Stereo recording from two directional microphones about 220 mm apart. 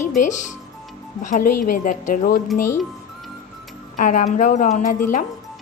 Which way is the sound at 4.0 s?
35° left (ahead or behind).